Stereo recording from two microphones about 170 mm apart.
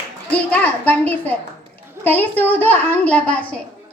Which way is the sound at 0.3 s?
10° left (ahead or behind).